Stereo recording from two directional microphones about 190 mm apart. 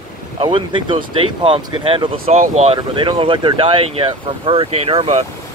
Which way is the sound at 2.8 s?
25° right (ahead or behind).